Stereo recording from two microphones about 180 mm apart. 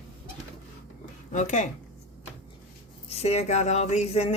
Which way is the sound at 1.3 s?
45° left (ahead or behind).